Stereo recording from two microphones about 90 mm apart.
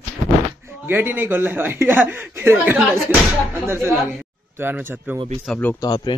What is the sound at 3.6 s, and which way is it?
A man's voice, 30° right (ahead or behind).